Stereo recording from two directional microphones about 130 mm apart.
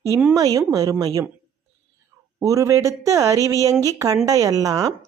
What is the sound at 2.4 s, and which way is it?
Speech, 25° right (ahead or behind).